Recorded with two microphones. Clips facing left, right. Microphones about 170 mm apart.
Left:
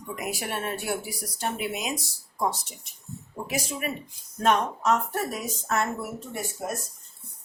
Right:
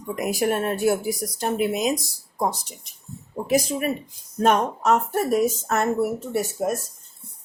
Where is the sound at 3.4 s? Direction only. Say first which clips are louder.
Right 10 dB; 35° right (ahead or behind).